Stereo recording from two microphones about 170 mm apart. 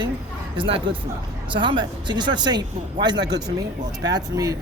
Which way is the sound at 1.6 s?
30° right (ahead or behind).